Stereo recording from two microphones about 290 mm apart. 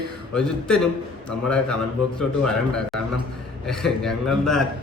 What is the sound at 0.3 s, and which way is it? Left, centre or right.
A man's voice, centre.